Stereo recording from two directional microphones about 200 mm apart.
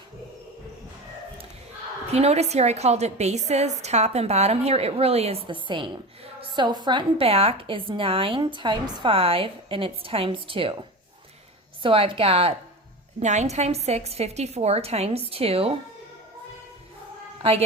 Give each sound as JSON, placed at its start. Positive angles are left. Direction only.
{"t": 2.1, "sound": "a woman's voice", "side_deg": -30}